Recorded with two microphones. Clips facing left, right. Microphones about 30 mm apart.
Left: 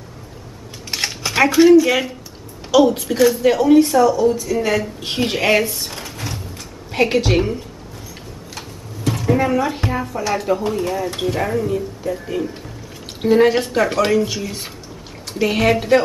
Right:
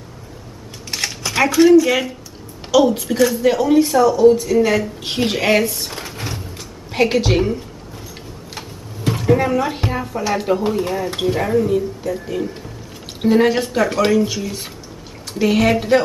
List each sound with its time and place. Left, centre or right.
0.9 s speech: centre
5.9 s drawer open or close: right
6.9 s speech: centre
8.5 s a sound: right
9.2 s a sound: centre
9.6 s speech: centre
11.3 s speech: centre